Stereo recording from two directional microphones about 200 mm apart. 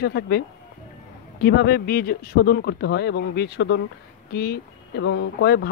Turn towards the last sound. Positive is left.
turn(degrees=55)  # may be behind; listen again after turning